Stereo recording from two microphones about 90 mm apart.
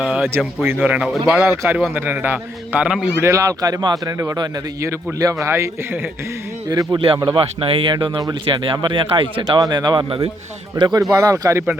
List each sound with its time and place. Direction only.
0.0 s a sound: 10° right (ahead or behind)
0.3 s a man's voice: 25° right (ahead or behind); by 1.5 s 5° right (ahead or behind)
1.5 s a man's voice: 20° right (ahead or behind)
3.3 s speech: 40° right (ahead or behind)
5.2 s a man's voice: 35° right (ahead or behind)
6.7 s speech: 45° right (ahead or behind)
7.3 s speech: 90° right
8.4 s speech: 70° right (ahead or behind)
9.5 s speech: 50° right (ahead or behind)
11.2 s a man's voice: 35° right (ahead or behind)